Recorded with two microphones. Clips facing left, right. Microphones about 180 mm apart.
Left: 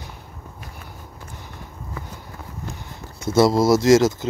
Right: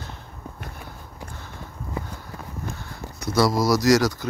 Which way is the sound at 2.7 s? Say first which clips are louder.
Right 1 dB; 20° left (ahead or behind).